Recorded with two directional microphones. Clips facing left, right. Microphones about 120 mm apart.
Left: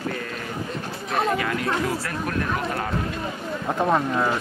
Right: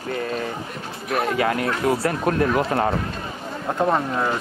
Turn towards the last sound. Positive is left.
turn(degrees=0)  # may be behind; listen again after turning